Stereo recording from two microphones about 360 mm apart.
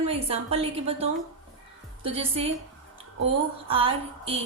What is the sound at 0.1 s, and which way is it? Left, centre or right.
Speech, centre.